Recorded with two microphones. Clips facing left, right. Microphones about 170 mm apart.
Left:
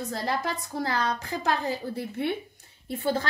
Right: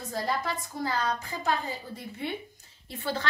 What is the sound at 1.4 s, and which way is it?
Speech, 70° left (ahead or behind).